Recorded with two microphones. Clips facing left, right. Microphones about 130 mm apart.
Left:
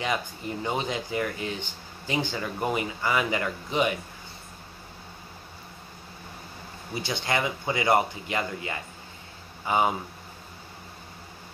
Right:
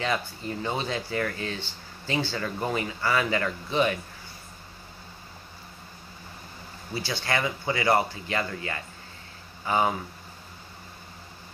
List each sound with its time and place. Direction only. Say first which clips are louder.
0.0 s speech: even; 15° left (ahead or behind)
6.9 s speech: even; 20° left (ahead or behind)